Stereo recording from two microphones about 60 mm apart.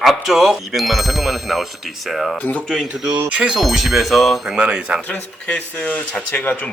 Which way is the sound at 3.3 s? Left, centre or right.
Centre.